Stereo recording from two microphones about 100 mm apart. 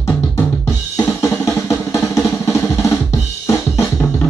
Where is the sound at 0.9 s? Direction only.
30° left (ahead or behind).